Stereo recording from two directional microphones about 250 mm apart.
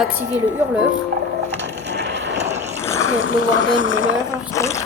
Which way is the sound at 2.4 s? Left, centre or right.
Right.